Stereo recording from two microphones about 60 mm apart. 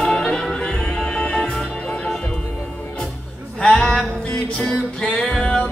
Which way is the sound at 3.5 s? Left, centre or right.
Centre.